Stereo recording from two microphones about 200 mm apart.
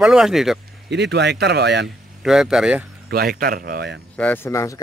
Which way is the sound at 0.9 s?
60° right (ahead or behind).